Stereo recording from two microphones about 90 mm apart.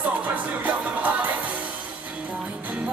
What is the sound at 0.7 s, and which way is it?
Music, 15° right (ahead or behind).